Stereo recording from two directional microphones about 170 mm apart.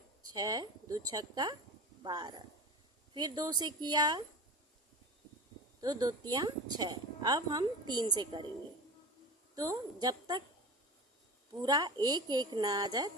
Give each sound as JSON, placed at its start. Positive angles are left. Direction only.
{"t": 0.3, "sound": "a woman's voice", "side_deg": -25}
{"t": 5.8, "sound": "a woman's voice", "side_deg": -25}
{"t": 9.6, "sound": "a woman's voice", "side_deg": -20}
{"t": 11.6, "sound": "a woman's voice", "side_deg": -25}